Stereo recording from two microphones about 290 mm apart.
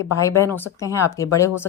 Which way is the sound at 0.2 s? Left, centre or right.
Centre.